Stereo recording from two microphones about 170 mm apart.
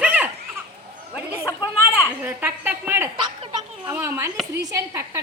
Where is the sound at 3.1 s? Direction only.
30° right (ahead or behind).